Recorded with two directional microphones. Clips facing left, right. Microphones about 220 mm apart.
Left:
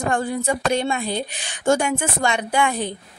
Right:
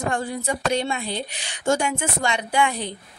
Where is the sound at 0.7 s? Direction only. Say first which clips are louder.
Left 3 dB; 50° left (ahead or behind).